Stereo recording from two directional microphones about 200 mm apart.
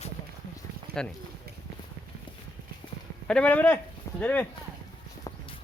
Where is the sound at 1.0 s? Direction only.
5° left (ahead or behind).